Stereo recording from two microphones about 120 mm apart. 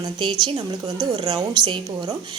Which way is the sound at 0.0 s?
40° right (ahead or behind).